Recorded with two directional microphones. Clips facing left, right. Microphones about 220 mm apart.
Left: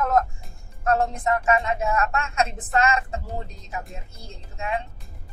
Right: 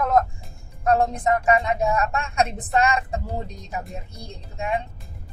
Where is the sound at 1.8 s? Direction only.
35° right (ahead or behind).